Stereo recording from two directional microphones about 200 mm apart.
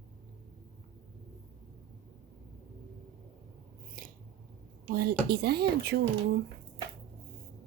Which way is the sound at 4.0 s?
45° right (ahead or behind).